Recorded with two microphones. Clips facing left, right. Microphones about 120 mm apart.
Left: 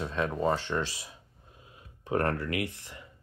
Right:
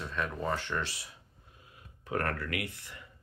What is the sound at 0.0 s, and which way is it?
Speech, 30° left (ahead or behind).